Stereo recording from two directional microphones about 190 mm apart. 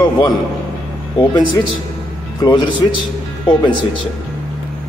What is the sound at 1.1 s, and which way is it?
Speech, 25° left (ahead or behind).